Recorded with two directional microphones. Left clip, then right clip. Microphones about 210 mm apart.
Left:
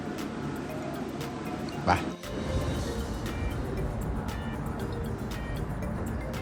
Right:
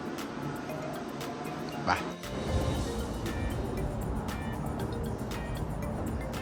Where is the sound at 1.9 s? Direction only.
5° right (ahead or behind).